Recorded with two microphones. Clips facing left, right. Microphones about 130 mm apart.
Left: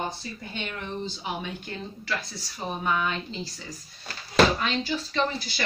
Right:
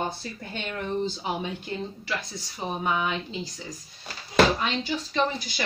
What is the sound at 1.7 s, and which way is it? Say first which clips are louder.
Speech: right 2 dB; 15° right (ahead or behind).